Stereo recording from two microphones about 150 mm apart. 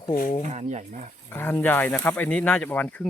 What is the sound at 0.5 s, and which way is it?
Speech, 50° right (ahead or behind).